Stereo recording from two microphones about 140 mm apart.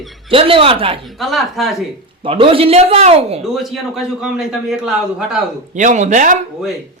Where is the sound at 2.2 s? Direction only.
40° right (ahead or behind).